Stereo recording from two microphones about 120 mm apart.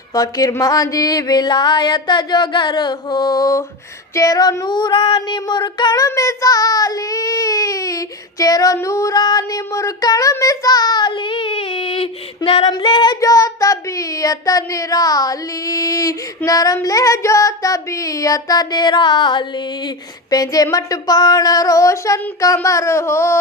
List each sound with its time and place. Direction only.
0.1 s child singing: 30° left (ahead or behind); by 12.0 s 55° left (ahead or behind)
12.6 s child singing: 40° left (ahead or behind)
13.1 s speech: 30° left (ahead or behind)